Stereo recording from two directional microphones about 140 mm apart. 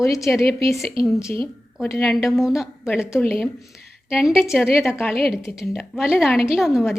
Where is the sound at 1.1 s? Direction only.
20° left (ahead or behind).